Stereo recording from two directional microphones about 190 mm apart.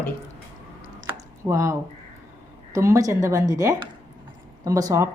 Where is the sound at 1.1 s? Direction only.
15° right (ahead or behind).